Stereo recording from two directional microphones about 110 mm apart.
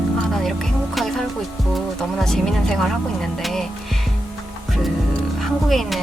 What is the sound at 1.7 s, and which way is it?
Speech, 5° left (ahead or behind).